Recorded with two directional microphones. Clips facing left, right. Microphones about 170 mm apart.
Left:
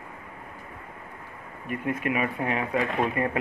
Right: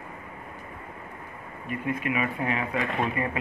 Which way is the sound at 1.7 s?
50° left (ahead or behind).